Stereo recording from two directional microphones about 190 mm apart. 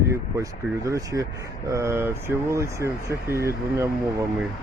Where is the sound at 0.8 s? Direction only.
15° right (ahead or behind).